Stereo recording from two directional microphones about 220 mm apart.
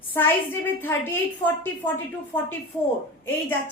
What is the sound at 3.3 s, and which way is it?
Speech, 10° left (ahead or behind).